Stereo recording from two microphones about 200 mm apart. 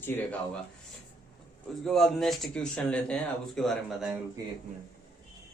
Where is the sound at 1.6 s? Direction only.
Centre (ahead or behind).